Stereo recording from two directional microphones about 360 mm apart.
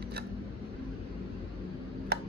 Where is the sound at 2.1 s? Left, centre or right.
Right.